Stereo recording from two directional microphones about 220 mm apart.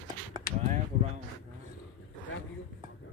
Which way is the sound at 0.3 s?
20° right (ahead or behind).